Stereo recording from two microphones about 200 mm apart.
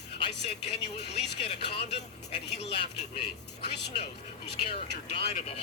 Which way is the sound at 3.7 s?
55° left (ahead or behind).